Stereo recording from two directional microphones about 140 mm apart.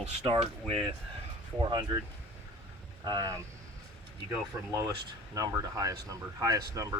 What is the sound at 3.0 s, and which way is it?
Speech, 25° right (ahead or behind).